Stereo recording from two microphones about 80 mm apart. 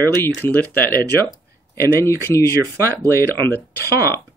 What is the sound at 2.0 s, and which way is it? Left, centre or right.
Speech, left.